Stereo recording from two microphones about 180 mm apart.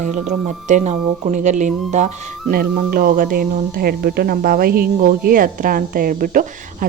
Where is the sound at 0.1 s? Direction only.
45° right (ahead or behind).